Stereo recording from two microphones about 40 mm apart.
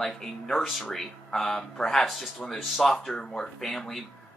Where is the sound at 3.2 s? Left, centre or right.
Centre.